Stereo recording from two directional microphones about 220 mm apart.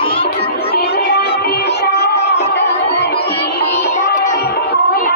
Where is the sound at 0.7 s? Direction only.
45° left (ahead or behind).